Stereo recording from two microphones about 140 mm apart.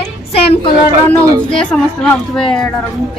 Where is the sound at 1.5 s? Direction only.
5° left (ahead or behind).